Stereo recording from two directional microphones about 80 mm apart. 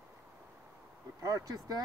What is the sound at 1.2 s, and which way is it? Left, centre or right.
Speech, right.